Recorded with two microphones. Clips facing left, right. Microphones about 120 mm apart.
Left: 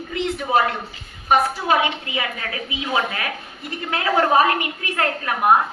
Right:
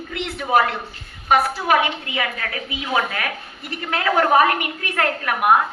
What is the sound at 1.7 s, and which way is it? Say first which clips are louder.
A woman's voice: right 2 dB; 25° left (ahead or behind).